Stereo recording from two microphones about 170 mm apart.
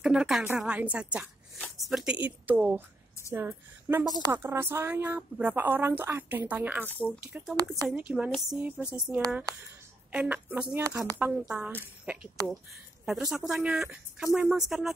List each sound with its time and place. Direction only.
0.0 s a woman's voice: 5° right (ahead or behind)